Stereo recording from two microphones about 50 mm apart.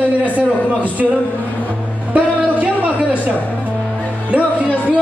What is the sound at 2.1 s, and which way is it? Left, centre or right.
Music, right.